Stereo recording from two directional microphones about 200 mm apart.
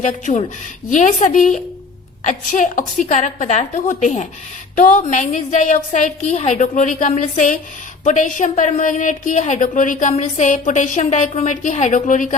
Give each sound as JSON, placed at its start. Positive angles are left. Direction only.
{"t": 0.0, "sound": "a woman's voice", "side_deg": 35}